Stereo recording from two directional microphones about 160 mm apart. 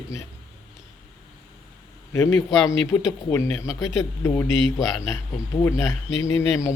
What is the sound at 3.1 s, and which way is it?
Speech, 20° left (ahead or behind).